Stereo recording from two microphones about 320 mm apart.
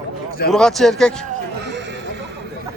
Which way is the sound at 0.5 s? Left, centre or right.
Centre.